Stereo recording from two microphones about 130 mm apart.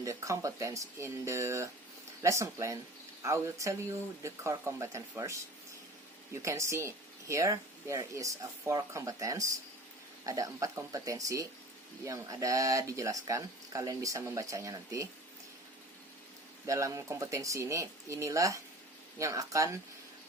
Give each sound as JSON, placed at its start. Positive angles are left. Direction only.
{"t": 0.0, "sound": "speech", "side_deg": -25}
{"t": 16.6, "sound": "speech", "side_deg": -25}